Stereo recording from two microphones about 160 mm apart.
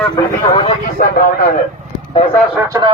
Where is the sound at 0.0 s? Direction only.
25° left (ahead or behind).